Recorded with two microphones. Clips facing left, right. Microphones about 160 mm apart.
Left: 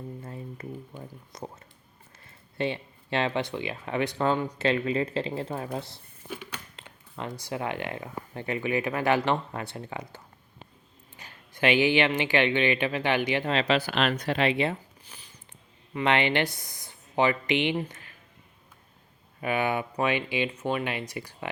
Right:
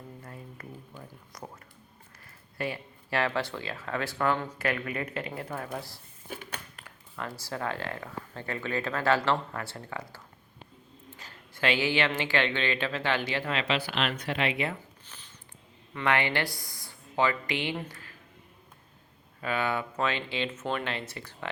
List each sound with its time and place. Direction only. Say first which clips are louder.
0.2 s a sound: left 6 dB; 25° left (ahead or behind)
2.6 s speech: left 4 dB; 25° left (ahead or behind)
6.2 s a sound: left 2 dB; 50° right (ahead or behind)
6.7 s speech: left 1 dB; 20° left (ahead or behind)
11.2 s speech: left 4 dB; 15° left (ahead or behind)
13.5 s speech: left 4 dB; 35° left (ahead or behind)
15.0 s a sound: left 1 dB; 10° left (ahead or behind)
16.0 s speech: left 3 dB; 20° left (ahead or behind)
19.4 s speech: left 3 dB; 15° left (ahead or behind)